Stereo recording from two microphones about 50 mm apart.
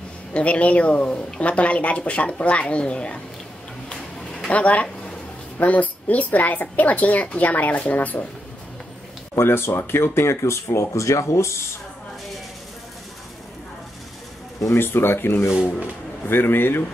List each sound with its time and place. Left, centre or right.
0.3 s speech: left
4.5 s a woman's voice: left
9.3 s speech: left
14.7 s speech: left
15.5 s speech: centre
16.3 s speech: left